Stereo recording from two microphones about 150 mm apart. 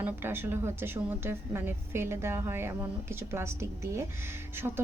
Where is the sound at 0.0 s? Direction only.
15° right (ahead or behind).